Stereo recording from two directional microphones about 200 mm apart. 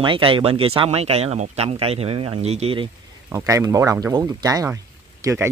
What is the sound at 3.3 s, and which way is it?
Speech, 15° right (ahead or behind).